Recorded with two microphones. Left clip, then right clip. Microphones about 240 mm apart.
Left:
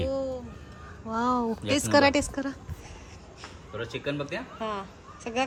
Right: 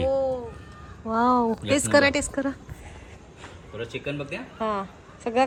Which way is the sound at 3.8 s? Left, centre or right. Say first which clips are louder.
Even; centre.